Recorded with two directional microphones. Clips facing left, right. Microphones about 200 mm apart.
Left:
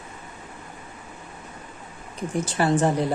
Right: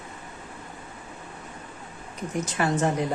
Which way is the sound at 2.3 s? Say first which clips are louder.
Left 3 dB; 30° left (ahead or behind).